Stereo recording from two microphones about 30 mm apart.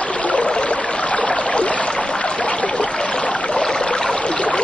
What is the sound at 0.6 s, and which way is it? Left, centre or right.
Stream, left.